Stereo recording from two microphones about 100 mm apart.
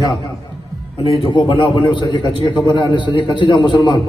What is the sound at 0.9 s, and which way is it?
A man's voice, 65° left (ahead or behind).